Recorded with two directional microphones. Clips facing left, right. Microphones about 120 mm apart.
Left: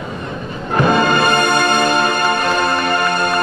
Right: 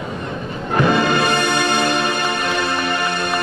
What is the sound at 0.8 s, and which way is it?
Music, 45° left (ahead or behind).